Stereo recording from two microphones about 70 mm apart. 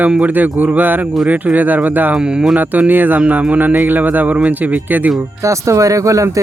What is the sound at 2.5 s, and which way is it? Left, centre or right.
Speech, right.